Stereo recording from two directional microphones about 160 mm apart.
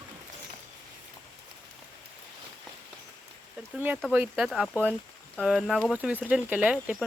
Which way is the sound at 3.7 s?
10° right (ahead or behind).